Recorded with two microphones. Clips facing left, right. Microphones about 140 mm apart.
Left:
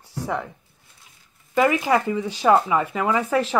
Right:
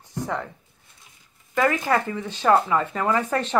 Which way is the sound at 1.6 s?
15° left (ahead or behind).